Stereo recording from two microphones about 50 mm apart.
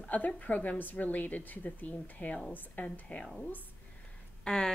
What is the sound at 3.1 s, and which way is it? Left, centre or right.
Speech, left.